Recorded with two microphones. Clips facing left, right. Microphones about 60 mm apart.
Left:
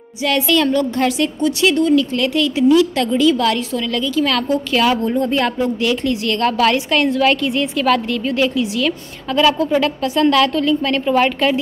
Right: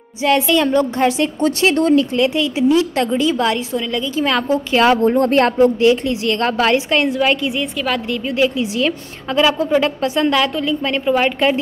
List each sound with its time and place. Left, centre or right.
0.2 s a woman's voice: right
1.4 s speech: right
2.1 s a woman's voice: right
5.1 s speech: right
5.8 s a woman's voice: right; by 8.2 s centre
8.3 s a woman's voice: right